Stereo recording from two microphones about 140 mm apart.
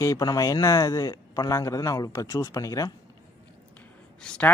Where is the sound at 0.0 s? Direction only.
25° left (ahead or behind).